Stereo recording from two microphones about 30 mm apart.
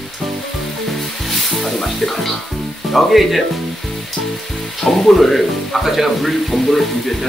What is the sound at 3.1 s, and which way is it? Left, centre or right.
Speech, centre.